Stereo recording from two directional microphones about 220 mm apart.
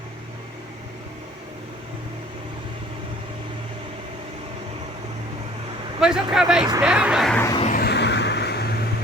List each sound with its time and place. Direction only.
6.0 s speech: 5° right (ahead or behind)
6.8 s a sound: 5° right (ahead or behind)
7.6 s vehicle: 40° left (ahead or behind)